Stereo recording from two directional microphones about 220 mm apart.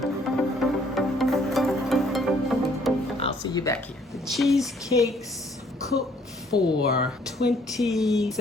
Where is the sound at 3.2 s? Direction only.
25° left (ahead or behind).